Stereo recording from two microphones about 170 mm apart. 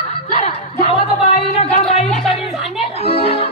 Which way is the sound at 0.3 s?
35° left (ahead or behind).